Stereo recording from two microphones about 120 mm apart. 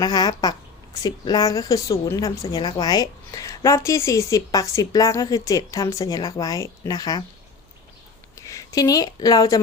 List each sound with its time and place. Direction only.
0.0 s a woman's voice: 35° left (ahead or behind)
8.4 s speech: 25° left (ahead or behind)